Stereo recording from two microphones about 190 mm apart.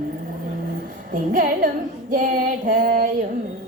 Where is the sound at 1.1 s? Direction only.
45° right (ahead or behind).